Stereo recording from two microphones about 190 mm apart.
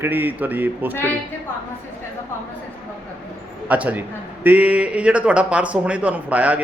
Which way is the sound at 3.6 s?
10° right (ahead or behind).